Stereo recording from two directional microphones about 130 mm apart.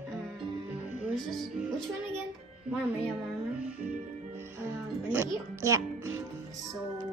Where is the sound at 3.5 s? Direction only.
10° right (ahead or behind).